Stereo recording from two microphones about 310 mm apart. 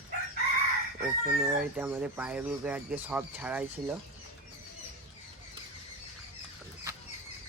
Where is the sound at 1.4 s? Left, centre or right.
Centre.